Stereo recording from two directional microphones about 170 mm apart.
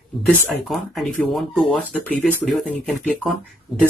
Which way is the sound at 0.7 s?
Centre (ahead or behind).